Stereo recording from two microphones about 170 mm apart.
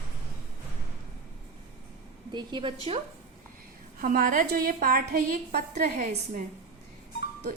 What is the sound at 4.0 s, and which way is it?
A woman's voice, 55° right (ahead or behind).